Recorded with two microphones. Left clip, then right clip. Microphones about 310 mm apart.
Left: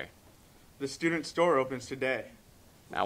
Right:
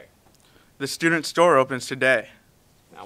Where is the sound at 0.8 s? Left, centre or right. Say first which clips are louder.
Right 9 dB; right.